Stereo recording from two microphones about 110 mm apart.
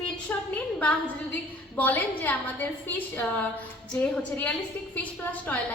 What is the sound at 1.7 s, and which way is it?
A woman's voice, 15° left (ahead or behind).